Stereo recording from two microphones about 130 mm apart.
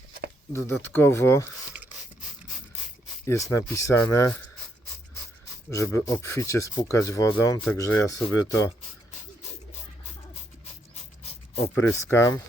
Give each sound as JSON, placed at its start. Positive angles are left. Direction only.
{"t": 0.5, "sound": "speech", "side_deg": 15}
{"t": 3.2, "sound": "speech", "side_deg": 20}
{"t": 5.7, "sound": "speech", "side_deg": 25}
{"t": 11.2, "sound": "a sound", "side_deg": 55}
{"t": 11.9, "sound": "speech", "side_deg": 20}